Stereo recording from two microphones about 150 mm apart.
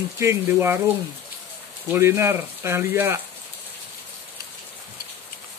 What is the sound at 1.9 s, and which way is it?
Speech, 15° right (ahead or behind).